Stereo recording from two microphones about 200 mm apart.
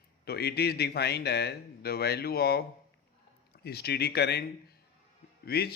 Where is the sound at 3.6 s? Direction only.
55° left (ahead or behind).